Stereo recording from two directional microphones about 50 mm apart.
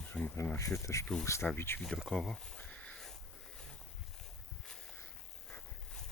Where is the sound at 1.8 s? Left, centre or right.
Centre.